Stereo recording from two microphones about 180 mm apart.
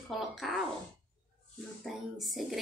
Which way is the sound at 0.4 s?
Centre (ahead or behind).